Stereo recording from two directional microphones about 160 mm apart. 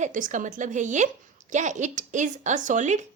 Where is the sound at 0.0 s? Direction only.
55° right (ahead or behind).